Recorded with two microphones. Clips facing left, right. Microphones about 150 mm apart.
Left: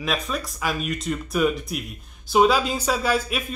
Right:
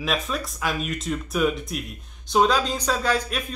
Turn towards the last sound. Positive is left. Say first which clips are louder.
# left 1 dB
turn(degrees=5)  # may be behind; listen again after turning